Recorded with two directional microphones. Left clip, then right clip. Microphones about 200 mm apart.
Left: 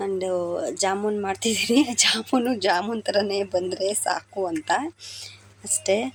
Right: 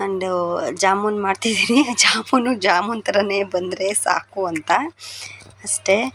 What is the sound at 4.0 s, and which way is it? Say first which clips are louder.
Speech: right 5 dB; 10° right (ahead or behind).